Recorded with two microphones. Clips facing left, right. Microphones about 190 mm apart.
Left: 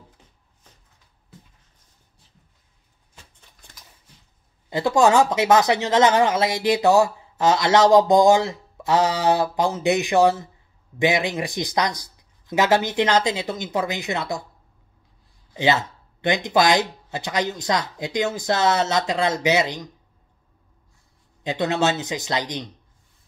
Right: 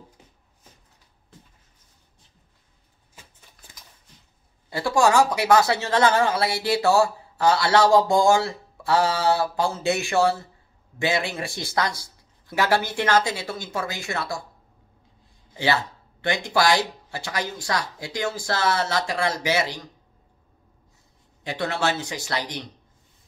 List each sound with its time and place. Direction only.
3.2 s a sound: 5° right (ahead or behind)
4.6 s speech: 20° left (ahead or behind)
15.5 s speech: 20° left (ahead or behind)
21.5 s speech: 20° left (ahead or behind)